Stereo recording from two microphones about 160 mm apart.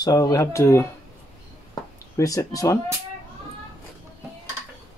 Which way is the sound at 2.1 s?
20° left (ahead or behind).